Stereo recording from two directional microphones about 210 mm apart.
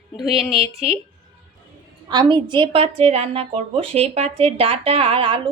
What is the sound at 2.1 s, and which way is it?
A woman's voice, 20° right (ahead or behind).